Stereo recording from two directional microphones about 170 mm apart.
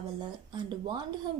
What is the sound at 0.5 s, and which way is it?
Speech, 25° right (ahead or behind).